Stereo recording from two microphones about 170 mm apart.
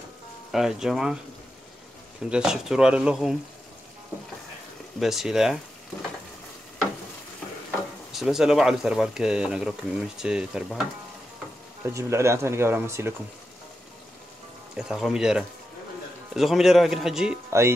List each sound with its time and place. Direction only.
0.5 s speech: centre (ahead or behind)
2.2 s speech: 5° right (ahead or behind)
5.0 s speech: centre (ahead or behind)
8.1 s speech: centre (ahead or behind)
11.8 s speech: 15° right (ahead or behind)
14.8 s speech: centre (ahead or behind)
17.5 s speech: 15° right (ahead or behind)